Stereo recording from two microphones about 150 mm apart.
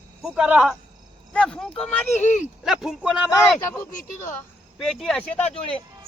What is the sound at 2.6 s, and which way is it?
Speech, centre (ahead or behind).